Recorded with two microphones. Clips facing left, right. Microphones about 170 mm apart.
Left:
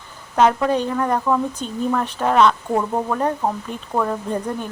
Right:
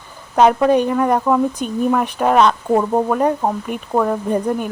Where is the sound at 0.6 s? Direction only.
15° right (ahead or behind).